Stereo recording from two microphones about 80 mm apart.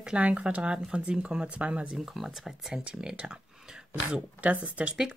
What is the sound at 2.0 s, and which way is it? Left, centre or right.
Speech, centre.